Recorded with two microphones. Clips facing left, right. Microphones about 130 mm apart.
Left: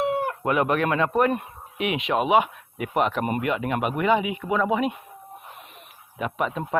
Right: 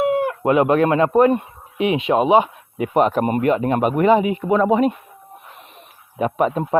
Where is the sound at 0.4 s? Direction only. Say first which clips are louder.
Right 7 dB; 25° right (ahead or behind); by 4.9 s 40° right (ahead or behind).